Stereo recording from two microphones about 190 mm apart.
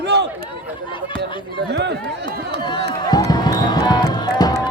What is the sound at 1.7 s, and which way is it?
Speech, 60° right (ahead or behind).